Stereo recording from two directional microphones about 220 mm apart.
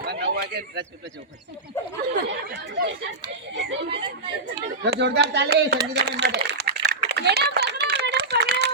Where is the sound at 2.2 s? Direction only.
50° right (ahead or behind).